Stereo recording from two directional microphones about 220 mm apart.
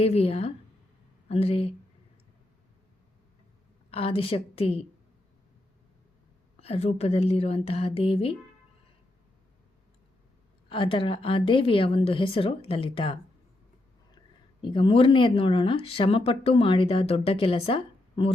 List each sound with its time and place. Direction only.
0.0 s speech: 25° left (ahead or behind)
3.9 s speech: 25° left (ahead or behind)
6.6 s speech: 30° left (ahead or behind)
10.7 s speech: 25° left (ahead or behind)
14.6 s speech: 20° left (ahead or behind)